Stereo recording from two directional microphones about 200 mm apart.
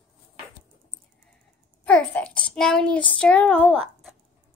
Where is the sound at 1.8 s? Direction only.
5° left (ahead or behind).